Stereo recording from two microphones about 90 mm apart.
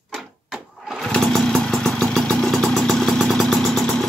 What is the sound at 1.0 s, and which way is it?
Motorcycle, 5° left (ahead or behind).